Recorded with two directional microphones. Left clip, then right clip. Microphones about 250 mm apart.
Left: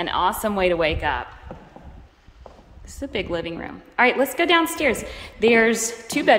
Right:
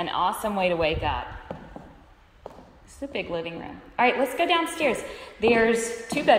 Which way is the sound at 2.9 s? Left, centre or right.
Centre.